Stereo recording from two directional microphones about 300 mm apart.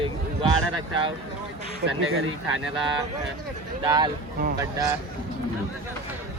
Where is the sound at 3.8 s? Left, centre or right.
Centre.